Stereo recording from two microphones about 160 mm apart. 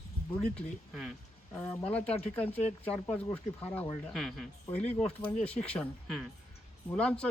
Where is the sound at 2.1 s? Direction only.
40° left (ahead or behind).